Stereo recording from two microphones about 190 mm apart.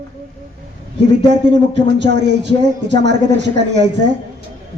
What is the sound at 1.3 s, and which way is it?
Speech, 65° right (ahead or behind).